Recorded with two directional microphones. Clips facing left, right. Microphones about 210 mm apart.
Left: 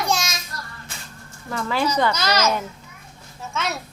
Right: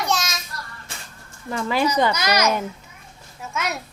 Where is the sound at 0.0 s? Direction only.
Centre (ahead or behind).